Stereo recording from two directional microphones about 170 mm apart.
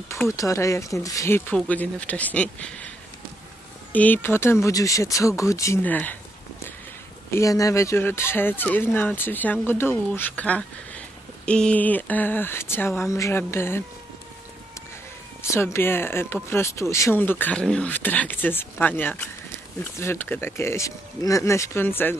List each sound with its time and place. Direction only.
0.1 s speech: 20° left (ahead or behind)
3.9 s speech: 10° left (ahead or behind)
7.2 s speech: 20° left (ahead or behind)
15.4 s speech: 15° left (ahead or behind)